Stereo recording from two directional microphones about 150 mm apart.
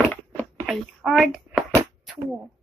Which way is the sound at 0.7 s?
Centre (ahead or behind).